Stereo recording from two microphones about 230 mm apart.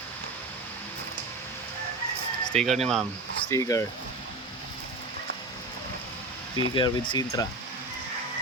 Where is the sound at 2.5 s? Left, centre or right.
Right.